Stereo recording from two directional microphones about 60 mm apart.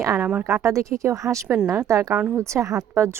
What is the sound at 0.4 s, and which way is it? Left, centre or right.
Speech, right.